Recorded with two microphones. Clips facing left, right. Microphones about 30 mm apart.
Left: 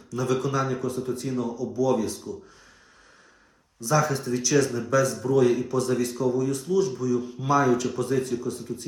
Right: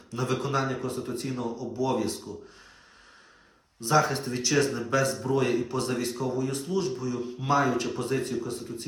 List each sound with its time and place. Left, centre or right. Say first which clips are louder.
0.1 s speech: left 3 dB; right
3.8 s speech: even; right